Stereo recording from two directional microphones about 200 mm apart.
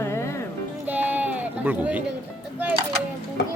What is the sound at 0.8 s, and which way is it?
Sheep, 10° right (ahead or behind).